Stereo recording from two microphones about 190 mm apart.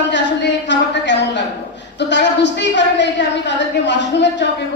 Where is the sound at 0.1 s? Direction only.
70° left (ahead or behind).